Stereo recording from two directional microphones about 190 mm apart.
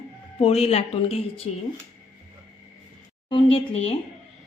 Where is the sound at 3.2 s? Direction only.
25° left (ahead or behind).